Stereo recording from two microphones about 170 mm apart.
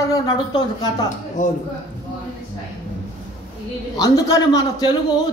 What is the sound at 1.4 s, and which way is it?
Speech, 45° left (ahead or behind).